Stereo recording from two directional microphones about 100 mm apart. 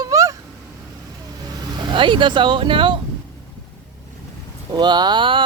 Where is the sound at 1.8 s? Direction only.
50° right (ahead or behind).